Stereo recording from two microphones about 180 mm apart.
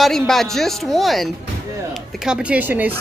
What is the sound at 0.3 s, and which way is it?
Speech, centre (ahead or behind).